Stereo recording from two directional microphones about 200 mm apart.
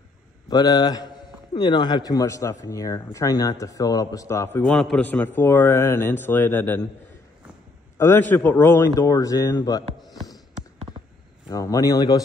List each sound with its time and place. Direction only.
0.5 s speech: 20° left (ahead or behind)
8.0 s speech: 10° left (ahead or behind)
11.5 s speech: 15° left (ahead or behind)